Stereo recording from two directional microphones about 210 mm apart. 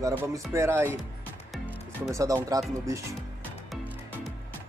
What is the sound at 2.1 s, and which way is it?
Speech, 15° right (ahead or behind).